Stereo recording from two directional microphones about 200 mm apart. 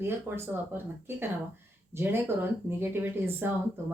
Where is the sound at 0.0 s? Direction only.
10° right (ahead or behind).